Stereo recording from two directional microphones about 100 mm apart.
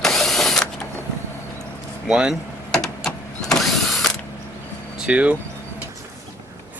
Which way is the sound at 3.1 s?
5° left (ahead or behind).